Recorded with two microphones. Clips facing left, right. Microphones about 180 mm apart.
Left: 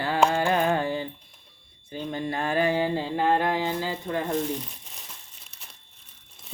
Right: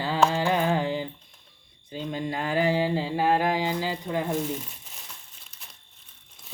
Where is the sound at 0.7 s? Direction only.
15° right (ahead or behind).